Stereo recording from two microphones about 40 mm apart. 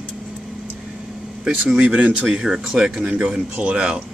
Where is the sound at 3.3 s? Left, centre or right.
Right.